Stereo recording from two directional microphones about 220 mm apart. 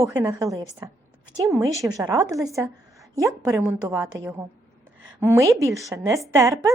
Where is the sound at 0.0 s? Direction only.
15° right (ahead or behind).